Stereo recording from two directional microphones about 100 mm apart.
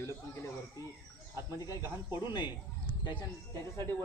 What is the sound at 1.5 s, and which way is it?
Speech, 35° left (ahead or behind).